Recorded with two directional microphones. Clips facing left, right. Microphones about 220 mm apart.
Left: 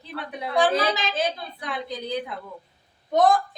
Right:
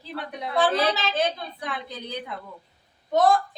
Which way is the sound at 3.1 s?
20° left (ahead or behind).